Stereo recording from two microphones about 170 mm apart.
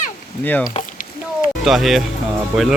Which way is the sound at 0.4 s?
10° left (ahead or behind).